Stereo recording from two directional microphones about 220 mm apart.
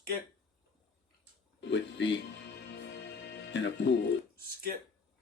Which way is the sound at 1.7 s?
55° left (ahead or behind).